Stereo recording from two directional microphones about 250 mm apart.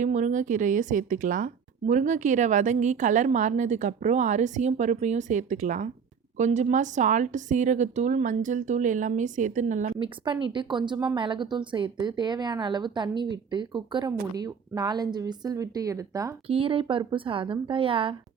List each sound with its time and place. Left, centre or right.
0.0 s a woman's voice: right